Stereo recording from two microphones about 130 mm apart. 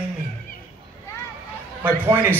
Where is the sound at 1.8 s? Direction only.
15° right (ahead or behind).